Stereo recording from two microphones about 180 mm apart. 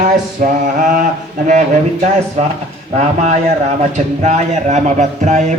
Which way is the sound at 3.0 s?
40° right (ahead or behind).